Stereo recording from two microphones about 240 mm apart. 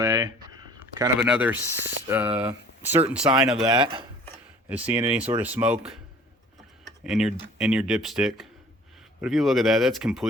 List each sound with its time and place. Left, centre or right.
0.0 s a sound: centre
0.9 s speech: centre
3.6 s speech: right
4.7 s speech: centre
7.0 s speech: centre